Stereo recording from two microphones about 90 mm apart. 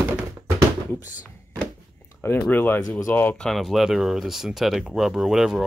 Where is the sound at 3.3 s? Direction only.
5° left (ahead or behind).